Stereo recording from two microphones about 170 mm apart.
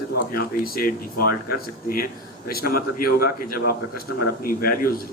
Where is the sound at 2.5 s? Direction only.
60° left (ahead or behind).